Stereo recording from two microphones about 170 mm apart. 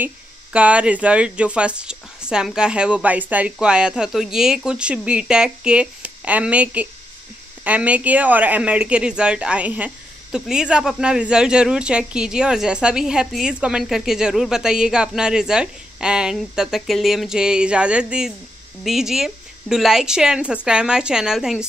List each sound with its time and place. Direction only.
0.0 s speech: 10° right (ahead or behind)